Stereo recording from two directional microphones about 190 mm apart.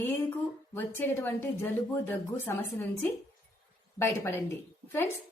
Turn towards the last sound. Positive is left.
turn(degrees=10)  # may be behind; listen again after turning